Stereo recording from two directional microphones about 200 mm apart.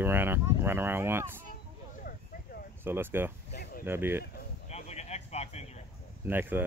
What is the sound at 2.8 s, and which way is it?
Speech, 10° right (ahead or behind).